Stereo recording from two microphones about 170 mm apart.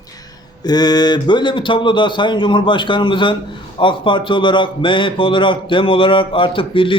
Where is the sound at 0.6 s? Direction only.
25° left (ahead or behind).